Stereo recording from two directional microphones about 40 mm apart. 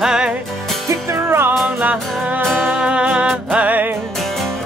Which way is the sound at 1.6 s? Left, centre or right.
Right.